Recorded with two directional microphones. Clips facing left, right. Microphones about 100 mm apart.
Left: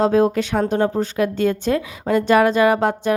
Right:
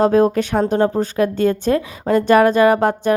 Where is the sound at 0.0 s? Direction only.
45° right (ahead or behind).